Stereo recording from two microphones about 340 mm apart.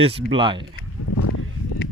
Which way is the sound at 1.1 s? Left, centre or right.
Left.